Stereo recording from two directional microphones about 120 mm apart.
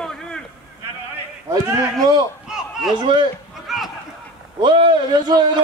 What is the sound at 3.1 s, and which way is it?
Speech, 45° right (ahead or behind).